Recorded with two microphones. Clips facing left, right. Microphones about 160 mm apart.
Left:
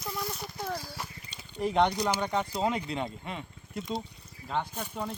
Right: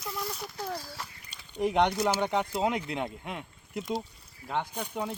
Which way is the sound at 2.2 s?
15° right (ahead or behind).